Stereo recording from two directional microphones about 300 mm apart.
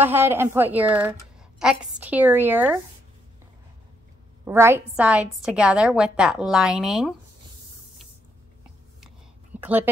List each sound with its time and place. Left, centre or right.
0.0 s a woman's voice: centre
4.5 s a woman's voice: centre
9.6 s a woman's voice: centre